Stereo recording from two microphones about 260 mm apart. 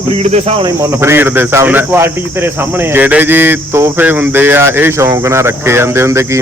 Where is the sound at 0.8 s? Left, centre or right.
Centre.